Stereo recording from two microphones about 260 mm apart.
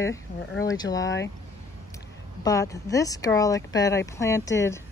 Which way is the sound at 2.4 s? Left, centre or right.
Centre.